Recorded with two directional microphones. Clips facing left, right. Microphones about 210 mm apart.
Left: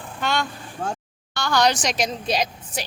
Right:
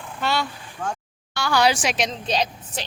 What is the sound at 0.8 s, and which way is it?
Speech, 30° left (ahead or behind).